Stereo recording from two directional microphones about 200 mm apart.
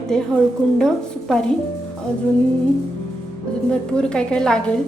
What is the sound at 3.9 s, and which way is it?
Speech, 5° left (ahead or behind).